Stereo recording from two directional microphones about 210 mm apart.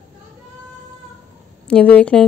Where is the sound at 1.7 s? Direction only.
5° left (ahead or behind).